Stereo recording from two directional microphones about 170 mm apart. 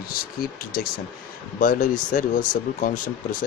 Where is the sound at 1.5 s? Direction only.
50° left (ahead or behind).